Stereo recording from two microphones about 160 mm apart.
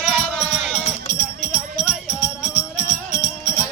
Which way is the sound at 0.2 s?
Centre (ahead or behind).